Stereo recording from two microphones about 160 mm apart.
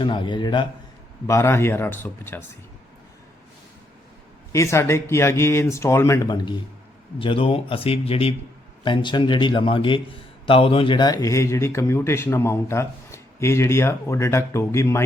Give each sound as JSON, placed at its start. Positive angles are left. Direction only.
{"t": 0.0, "sound": "a man's voice", "side_deg": 30}
{"t": 1.3, "sound": "a man's voice", "side_deg": 15}
{"t": 4.5, "sound": "a man's voice", "side_deg": 20}